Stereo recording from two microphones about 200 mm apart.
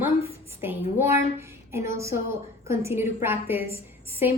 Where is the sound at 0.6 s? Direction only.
10° right (ahead or behind).